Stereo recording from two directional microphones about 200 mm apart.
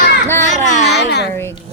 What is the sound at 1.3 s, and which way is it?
Speech, 10° left (ahead or behind).